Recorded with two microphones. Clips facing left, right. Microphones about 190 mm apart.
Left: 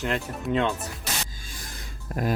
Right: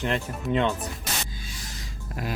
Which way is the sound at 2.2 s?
45° left (ahead or behind).